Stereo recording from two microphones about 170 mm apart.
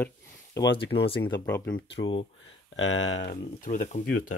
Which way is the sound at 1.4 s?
10° left (ahead or behind).